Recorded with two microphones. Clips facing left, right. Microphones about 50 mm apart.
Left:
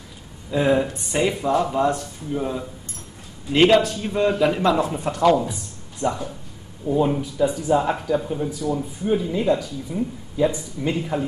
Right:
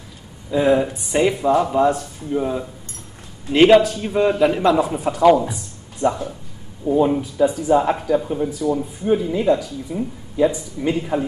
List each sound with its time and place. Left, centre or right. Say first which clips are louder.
0.5 s speech: right 3 dB; centre